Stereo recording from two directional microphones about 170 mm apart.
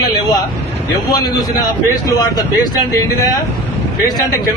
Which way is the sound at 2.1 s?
25° left (ahead or behind).